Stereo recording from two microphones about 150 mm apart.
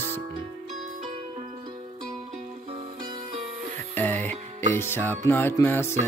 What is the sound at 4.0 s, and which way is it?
Music, 10° left (ahead or behind).